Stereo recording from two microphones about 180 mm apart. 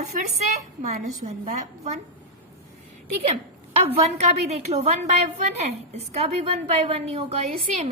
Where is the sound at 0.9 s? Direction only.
45° right (ahead or behind).